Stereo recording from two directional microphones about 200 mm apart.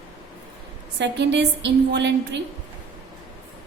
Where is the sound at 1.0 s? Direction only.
60° right (ahead or behind).